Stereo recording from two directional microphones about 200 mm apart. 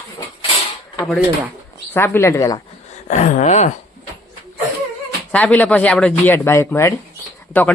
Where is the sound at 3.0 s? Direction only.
40° left (ahead or behind).